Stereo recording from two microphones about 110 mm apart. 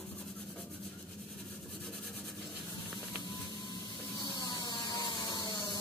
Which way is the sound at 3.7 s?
40° left (ahead or behind).